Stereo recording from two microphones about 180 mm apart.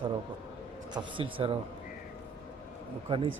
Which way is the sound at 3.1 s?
30° right (ahead or behind).